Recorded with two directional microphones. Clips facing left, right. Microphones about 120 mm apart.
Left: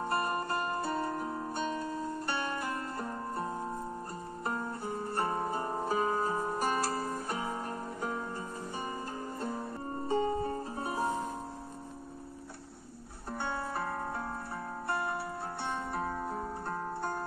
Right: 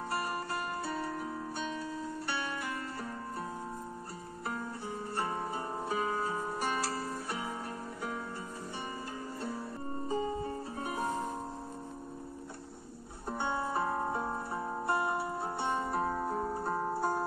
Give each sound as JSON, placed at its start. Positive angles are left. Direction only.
{"t": 0.0, "sound": "music", "side_deg": 45}
{"t": 10.0, "sound": "music", "side_deg": 70}
{"t": 10.5, "sound": "music", "side_deg": 35}
{"t": 13.3, "sound": "music", "side_deg": 0}